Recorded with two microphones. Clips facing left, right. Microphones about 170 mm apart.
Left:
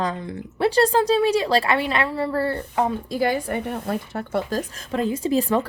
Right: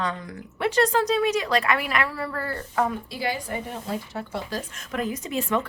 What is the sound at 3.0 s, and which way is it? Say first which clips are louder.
A woman's voice: left 7 dB; 45° left (ahead or behind).